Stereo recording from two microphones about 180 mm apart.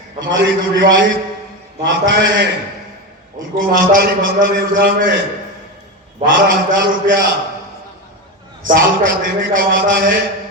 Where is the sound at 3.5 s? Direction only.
50° right (ahead or behind).